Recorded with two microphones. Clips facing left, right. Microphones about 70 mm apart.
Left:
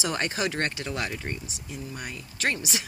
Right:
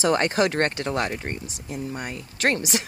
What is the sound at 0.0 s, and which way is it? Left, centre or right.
Speech, right.